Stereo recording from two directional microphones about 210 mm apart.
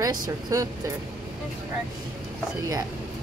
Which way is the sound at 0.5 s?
15° right (ahead or behind).